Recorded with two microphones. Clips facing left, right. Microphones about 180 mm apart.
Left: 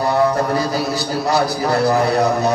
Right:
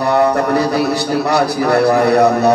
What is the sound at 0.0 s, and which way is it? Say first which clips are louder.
A man's voice: right 3 dB; 70° right (ahead or behind).